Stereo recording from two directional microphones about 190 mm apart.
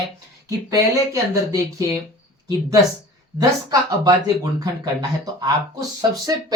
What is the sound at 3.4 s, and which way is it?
Speech, 20° right (ahead or behind).